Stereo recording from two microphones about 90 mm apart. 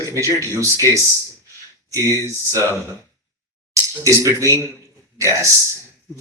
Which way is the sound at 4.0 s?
35° right (ahead or behind).